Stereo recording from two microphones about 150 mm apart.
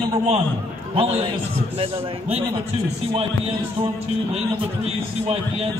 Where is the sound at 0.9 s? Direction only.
40° right (ahead or behind).